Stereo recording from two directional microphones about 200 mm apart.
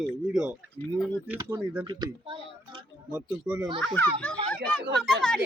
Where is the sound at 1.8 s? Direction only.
25° right (ahead or behind).